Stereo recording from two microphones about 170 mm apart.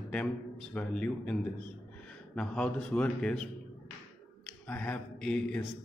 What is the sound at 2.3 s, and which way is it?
A man's voice, 5° left (ahead or behind).